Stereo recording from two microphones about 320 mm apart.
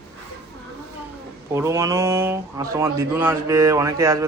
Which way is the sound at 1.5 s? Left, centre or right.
Centre.